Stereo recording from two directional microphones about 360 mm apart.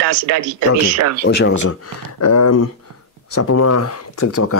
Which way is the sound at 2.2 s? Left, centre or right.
Left.